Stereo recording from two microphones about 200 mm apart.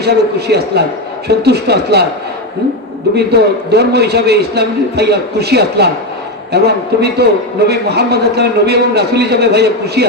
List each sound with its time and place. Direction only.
0.0 s a man's voice: 55° right (ahead or behind)
3.2 s a man's voice: 55° right (ahead or behind)